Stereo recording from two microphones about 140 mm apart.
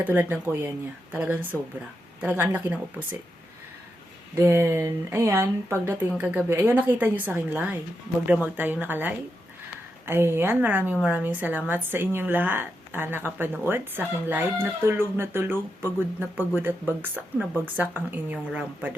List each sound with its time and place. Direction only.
0.0 s speech: 15° right (ahead or behind)
4.4 s speech: 15° right (ahead or behind)